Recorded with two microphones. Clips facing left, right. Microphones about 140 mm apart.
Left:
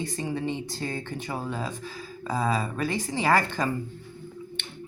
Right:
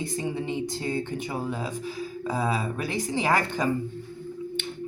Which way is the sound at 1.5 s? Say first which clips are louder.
Right 2 dB; 10° right (ahead or behind).